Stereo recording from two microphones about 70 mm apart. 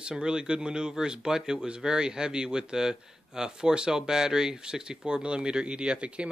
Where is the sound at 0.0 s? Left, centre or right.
Centre.